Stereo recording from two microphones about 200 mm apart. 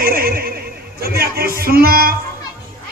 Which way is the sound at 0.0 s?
45° right (ahead or behind).